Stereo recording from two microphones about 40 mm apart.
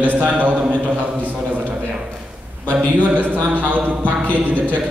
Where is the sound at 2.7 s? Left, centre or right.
Right.